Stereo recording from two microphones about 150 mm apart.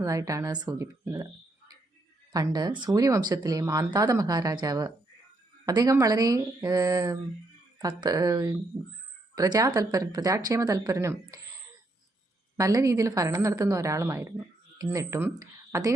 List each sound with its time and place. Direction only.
0.0 s a woman's voice: 20° right (ahead or behind)
12.5 s a woman's voice: 20° right (ahead or behind)